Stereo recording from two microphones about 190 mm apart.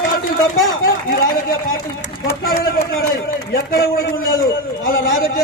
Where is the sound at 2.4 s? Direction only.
50° left (ahead or behind).